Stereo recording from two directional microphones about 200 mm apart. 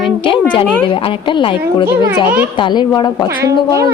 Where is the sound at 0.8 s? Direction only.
25° left (ahead or behind).